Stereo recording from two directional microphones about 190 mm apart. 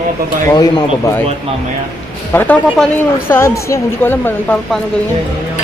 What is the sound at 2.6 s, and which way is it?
Speech, centre (ahead or behind).